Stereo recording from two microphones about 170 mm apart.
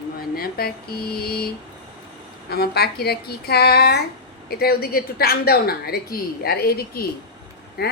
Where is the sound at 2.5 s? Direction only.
65° left (ahead or behind).